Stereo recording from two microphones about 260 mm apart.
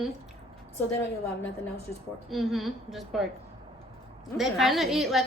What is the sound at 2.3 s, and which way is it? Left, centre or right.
Speech, centre.